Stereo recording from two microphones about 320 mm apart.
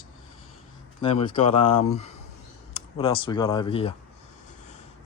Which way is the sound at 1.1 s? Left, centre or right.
Centre.